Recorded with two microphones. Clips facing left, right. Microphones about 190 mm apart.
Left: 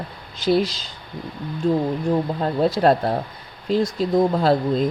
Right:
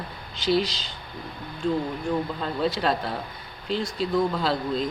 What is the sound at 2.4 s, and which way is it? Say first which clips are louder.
Speech: left 6 dB; 45° left (ahead or behind).